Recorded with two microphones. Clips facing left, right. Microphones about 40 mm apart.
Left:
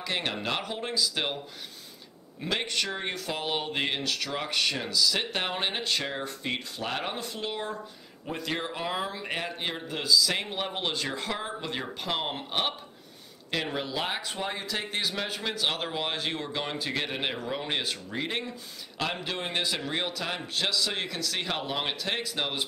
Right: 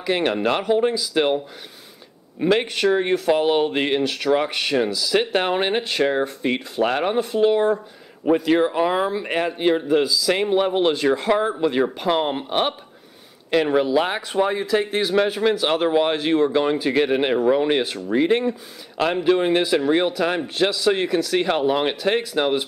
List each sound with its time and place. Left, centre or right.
0.0 s speech: centre
2.4 s speech: right
7.0 s speech: centre
9.5 s speech: centre
17.3 s speech: right
17.7 s speech: centre